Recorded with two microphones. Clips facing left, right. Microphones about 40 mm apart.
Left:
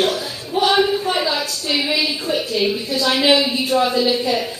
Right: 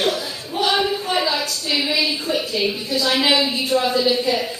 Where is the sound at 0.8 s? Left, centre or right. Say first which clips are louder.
Left 3 dB; centre.